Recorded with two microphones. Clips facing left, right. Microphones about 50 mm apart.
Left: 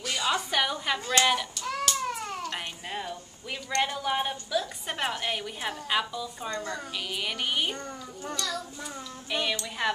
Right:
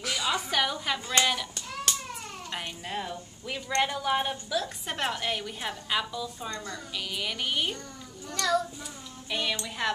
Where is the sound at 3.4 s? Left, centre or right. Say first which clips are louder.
Right 1 dB; centre.